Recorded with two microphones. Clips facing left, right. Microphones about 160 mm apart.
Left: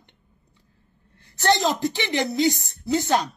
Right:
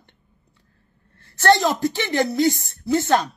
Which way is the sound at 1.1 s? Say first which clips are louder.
Right 4 dB; 15° left (ahead or behind).